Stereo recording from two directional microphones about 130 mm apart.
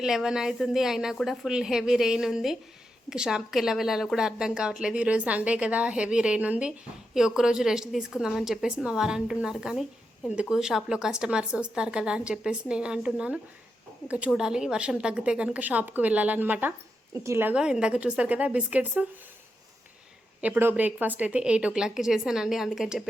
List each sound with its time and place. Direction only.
0.0 s a woman's voice: 5° right (ahead or behind)
17.5 s speech: 5° right (ahead or behind)
20.4 s a woman's voice: 15° right (ahead or behind)